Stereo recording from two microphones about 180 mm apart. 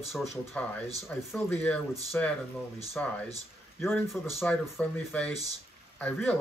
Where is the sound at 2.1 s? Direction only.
5° left (ahead or behind).